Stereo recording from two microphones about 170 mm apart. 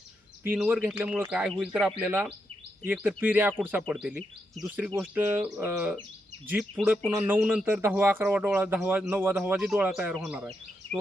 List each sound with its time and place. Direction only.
0.4 s speech: 10° right (ahead or behind)
4.9 s speech: 15° right (ahead or behind)